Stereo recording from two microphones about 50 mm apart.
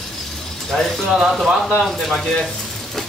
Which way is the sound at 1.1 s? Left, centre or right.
Centre.